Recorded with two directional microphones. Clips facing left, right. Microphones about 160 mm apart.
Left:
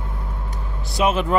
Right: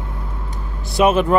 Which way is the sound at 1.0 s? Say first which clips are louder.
Right 5 dB; 55° right (ahead or behind).